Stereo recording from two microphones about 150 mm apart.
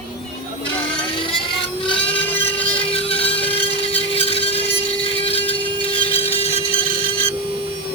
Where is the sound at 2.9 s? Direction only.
40° left (ahead or behind).